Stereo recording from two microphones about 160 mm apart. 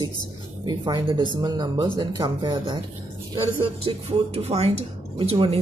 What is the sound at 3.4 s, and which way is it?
Speech, 40° right (ahead or behind).